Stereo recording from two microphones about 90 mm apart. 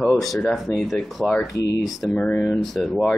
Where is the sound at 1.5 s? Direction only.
40° left (ahead or behind).